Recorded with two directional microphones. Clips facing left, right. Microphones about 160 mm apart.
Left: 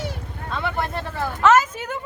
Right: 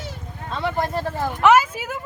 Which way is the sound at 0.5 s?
35° right (ahead or behind).